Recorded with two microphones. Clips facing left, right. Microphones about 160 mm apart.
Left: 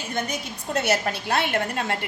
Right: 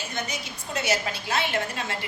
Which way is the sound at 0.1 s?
55° left (ahead or behind).